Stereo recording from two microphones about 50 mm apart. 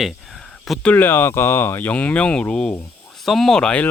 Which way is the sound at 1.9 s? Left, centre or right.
Left.